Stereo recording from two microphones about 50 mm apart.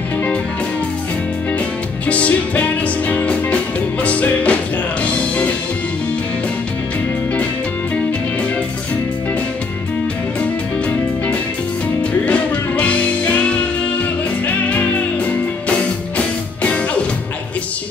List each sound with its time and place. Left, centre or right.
2.0 s music: left
12.3 s music: left
16.2 s music: left